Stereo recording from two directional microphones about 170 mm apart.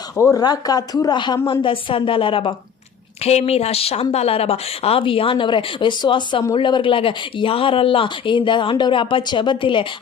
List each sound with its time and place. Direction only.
0.2 s speech: 20° left (ahead or behind)